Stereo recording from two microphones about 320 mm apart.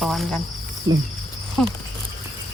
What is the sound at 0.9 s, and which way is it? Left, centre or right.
Speech, right.